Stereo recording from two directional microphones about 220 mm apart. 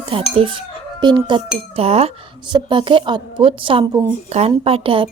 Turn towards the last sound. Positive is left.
turn(degrees=-25)  # may be behind; listen again after turning